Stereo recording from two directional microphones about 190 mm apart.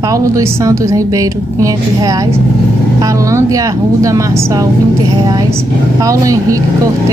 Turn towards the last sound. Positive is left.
turn(degrees=-15)  # may be behind; listen again after turning